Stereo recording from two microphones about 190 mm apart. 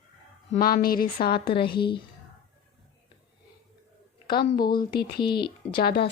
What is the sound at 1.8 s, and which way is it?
Speech, 25° left (ahead or behind).